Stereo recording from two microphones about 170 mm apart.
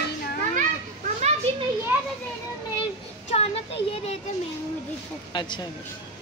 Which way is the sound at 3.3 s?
35° left (ahead or behind).